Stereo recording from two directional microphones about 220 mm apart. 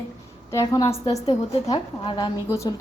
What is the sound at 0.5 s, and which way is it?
A woman's voice, 15° left (ahead or behind).